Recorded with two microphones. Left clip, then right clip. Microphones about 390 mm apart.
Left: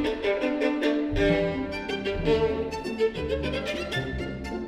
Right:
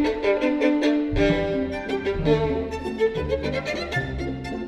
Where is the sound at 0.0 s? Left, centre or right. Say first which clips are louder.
Right 4 dB; left.